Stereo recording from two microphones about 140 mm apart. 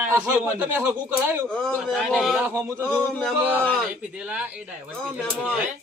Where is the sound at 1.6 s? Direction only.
Centre (ahead or behind).